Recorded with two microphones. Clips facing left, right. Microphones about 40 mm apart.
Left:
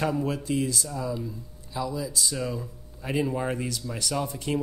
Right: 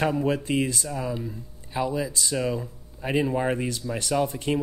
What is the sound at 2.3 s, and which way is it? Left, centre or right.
Speech, right.